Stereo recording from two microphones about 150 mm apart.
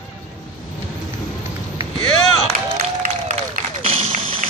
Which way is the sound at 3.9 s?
40° right (ahead or behind).